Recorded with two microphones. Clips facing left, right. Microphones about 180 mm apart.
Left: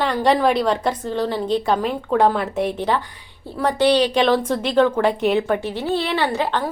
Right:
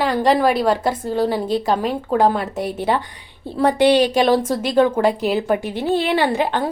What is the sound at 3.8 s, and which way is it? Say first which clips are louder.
Speech: right 2 dB; 55° right (ahead or behind).